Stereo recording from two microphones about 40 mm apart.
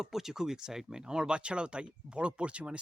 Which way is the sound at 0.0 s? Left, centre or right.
Centre.